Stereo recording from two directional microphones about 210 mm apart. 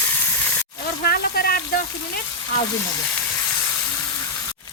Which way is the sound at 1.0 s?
45° left (ahead or behind).